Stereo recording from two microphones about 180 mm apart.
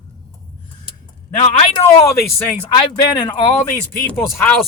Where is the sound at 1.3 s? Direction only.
40° left (ahead or behind).